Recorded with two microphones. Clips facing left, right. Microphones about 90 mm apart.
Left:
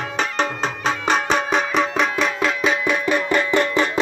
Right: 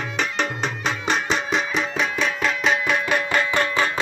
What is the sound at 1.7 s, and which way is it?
Music, 90° left.